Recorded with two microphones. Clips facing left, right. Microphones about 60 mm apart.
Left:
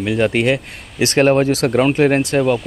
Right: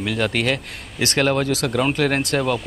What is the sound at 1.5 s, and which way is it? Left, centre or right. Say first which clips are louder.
Speech: left 6 dB; left.